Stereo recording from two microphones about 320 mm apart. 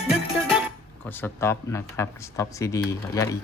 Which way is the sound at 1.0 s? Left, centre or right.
Centre.